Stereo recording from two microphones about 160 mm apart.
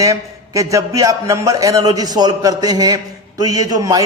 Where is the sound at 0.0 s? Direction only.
20° right (ahead or behind).